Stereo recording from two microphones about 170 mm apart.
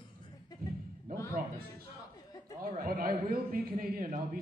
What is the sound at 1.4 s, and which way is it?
Speech, 50° right (ahead or behind).